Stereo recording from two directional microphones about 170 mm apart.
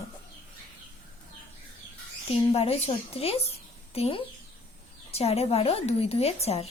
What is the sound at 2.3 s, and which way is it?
A woman's voice, 35° left (ahead or behind).